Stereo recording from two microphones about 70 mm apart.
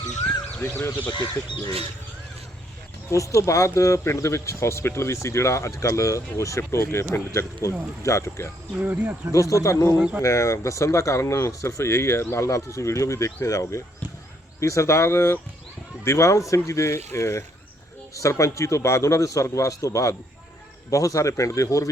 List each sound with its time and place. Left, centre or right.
1.1 s speech: left
3.1 s speech: left
8.8 s speech: right
9.3 s speech: left